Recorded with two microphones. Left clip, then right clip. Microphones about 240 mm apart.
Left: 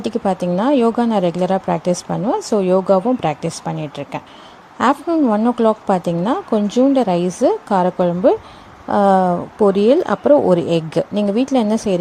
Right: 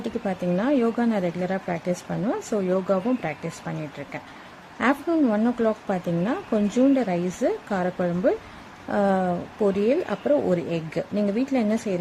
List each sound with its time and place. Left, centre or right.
0.0 s speech: centre
5.2 s speech: centre